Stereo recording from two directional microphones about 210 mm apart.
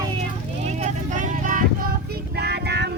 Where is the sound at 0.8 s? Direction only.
40° right (ahead or behind).